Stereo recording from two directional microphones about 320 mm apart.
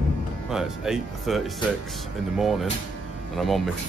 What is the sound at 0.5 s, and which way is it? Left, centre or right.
Speech, centre.